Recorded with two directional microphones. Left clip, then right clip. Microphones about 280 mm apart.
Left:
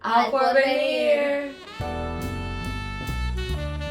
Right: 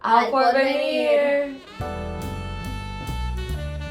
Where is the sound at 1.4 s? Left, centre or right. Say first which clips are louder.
Right 3 dB; centre.